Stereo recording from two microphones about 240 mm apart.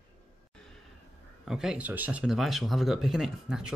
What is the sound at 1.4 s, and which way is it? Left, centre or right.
Speech, centre.